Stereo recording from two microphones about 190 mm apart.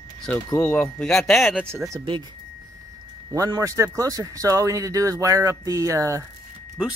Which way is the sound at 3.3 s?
20° right (ahead or behind).